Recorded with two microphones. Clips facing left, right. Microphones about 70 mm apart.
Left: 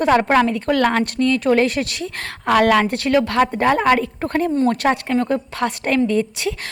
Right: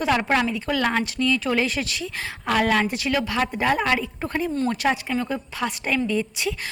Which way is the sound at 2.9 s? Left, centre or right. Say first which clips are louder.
Left 7 dB; left.